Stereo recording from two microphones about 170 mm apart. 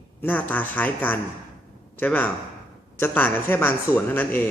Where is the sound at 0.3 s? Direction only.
10° left (ahead or behind).